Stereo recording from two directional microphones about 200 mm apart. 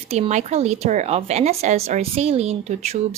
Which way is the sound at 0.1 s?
35° right (ahead or behind).